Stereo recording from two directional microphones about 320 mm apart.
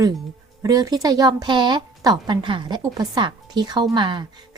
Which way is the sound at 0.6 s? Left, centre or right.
Centre.